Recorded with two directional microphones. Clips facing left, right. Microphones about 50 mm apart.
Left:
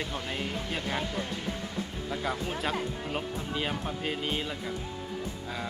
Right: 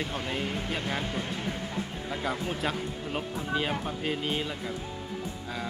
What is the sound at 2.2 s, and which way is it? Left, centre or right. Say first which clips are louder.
Speech: right 1 dB; centre.